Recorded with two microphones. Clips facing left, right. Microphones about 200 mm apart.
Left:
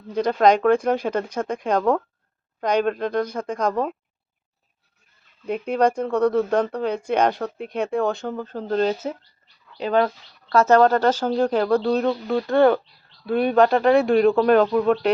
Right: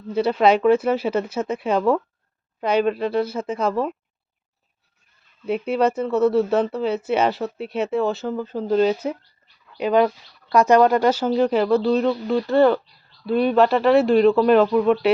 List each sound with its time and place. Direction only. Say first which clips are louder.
0.1 s speech: even; 5° right (ahead or behind)
5.5 s speech: even; 5° right (ahead or behind)